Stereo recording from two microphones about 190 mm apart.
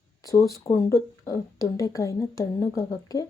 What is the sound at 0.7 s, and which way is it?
Speech, 15° left (ahead or behind).